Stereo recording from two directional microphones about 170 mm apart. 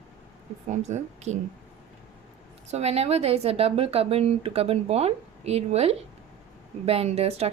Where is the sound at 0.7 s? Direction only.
40° right (ahead or behind).